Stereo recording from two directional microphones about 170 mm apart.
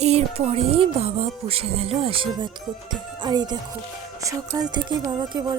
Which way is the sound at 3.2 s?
25° right (ahead or behind).